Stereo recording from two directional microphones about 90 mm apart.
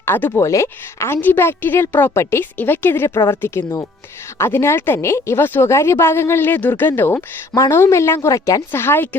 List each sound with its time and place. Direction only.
0.0 s a woman's voice: 25° left (ahead or behind)
8.7 s a woman's voice: 25° left (ahead or behind)